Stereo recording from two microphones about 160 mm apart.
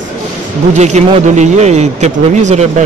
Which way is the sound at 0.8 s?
45° right (ahead or behind).